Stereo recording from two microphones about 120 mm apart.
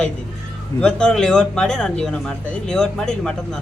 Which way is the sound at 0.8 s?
10° left (ahead or behind).